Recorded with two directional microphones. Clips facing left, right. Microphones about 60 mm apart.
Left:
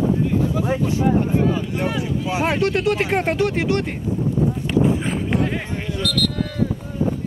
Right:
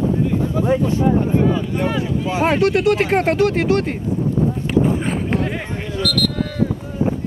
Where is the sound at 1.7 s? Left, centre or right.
Centre.